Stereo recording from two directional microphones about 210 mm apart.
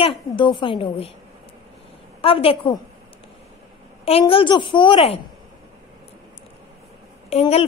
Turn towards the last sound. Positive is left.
turn(degrees=30)  # may be behind; listen again after turning